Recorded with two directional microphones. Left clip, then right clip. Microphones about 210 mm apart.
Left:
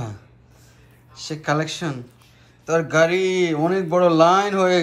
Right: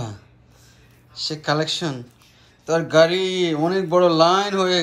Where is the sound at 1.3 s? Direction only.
5° right (ahead or behind).